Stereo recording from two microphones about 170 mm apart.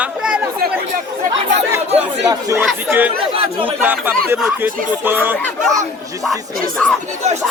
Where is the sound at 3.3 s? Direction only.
30° right (ahead or behind).